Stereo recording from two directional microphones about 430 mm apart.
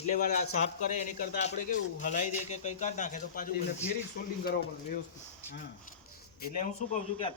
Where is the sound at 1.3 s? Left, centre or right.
Centre.